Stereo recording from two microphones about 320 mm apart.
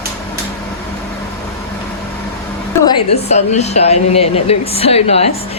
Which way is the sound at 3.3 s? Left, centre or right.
Left.